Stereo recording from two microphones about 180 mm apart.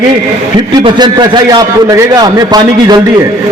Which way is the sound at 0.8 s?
25° right (ahead or behind).